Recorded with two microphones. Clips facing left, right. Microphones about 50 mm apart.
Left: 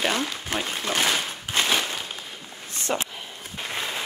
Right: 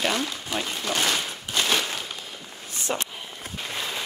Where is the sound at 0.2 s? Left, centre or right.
Left.